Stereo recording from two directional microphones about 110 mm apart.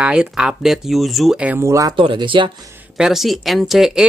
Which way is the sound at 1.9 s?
50° right (ahead or behind).